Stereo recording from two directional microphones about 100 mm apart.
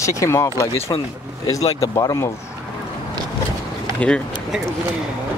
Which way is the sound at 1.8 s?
35° left (ahead or behind).